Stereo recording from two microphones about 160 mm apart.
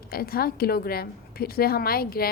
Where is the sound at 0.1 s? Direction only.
70° left (ahead or behind).